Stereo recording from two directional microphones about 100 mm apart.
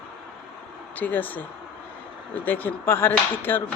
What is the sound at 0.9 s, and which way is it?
Speech, 15° left (ahead or behind).